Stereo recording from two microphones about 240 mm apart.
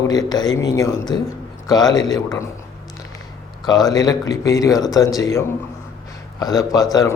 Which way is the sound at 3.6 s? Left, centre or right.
Centre.